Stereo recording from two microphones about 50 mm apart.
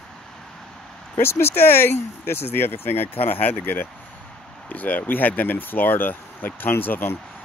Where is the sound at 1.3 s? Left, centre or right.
Left.